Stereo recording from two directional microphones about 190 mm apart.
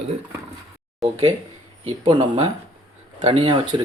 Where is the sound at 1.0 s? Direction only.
Centre (ahead or behind).